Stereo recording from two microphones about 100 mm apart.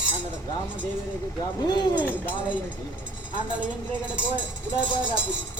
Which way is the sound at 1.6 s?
45° left (ahead or behind).